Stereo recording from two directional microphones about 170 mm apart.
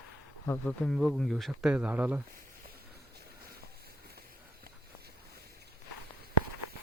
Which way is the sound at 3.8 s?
65° right (ahead or behind).